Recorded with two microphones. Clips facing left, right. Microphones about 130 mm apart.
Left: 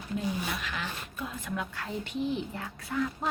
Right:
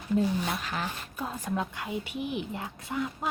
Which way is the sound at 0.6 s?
40° right (ahead or behind).